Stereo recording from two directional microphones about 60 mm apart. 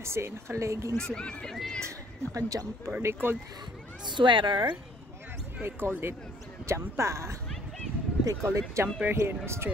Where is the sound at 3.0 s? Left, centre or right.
Right.